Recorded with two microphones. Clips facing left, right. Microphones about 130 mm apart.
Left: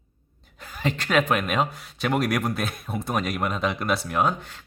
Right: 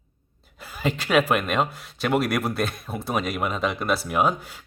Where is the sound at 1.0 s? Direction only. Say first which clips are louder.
Right 2 dB; 5° right (ahead or behind).